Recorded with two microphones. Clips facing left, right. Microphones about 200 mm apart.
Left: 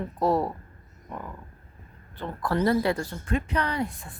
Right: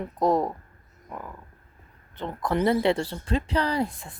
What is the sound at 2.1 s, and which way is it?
Speech, 20° right (ahead or behind).